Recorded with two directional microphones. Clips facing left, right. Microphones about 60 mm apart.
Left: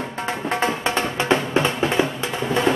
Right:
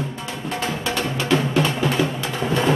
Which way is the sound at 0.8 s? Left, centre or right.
Left.